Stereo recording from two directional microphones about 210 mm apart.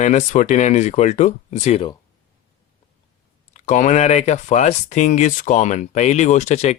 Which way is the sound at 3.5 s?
35° left (ahead or behind).